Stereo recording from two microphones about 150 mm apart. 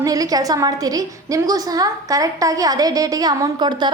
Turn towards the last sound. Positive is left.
turn(degrees=-30)  # may be behind; listen again after turning